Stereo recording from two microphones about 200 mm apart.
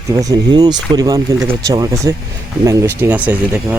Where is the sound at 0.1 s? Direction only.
15° right (ahead or behind).